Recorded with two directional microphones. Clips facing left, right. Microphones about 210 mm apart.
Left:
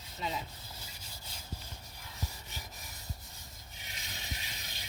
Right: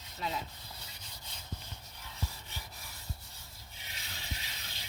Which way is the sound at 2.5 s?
15° left (ahead or behind).